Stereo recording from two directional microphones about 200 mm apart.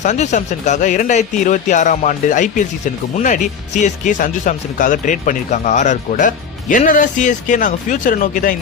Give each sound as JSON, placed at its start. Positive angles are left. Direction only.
{"t": 0.0, "sound": "speech", "side_deg": 35}